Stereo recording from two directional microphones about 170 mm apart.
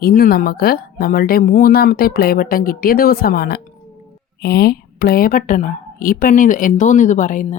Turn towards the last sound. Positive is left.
turn(degrees=50)  # may be behind; listen again after turning